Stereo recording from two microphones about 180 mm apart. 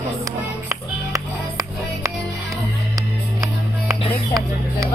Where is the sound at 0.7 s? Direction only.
20° right (ahead or behind).